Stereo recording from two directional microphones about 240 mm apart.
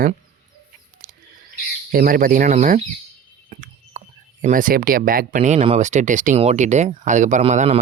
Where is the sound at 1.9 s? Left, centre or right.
Right.